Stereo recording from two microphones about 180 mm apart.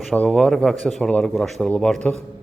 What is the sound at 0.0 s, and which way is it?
Speech, 5° left (ahead or behind).